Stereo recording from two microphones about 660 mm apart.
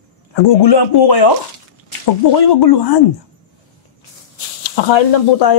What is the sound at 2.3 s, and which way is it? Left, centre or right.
Speech, left.